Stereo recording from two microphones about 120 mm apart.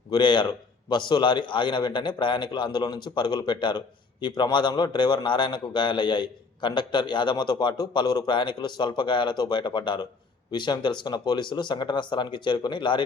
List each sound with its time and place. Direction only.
0.1 s a man's voice: 40° left (ahead or behind)